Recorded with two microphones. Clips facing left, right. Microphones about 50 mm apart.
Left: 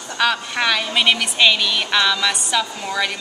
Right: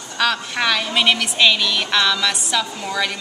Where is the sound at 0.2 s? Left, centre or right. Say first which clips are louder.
Left 1 dB; centre.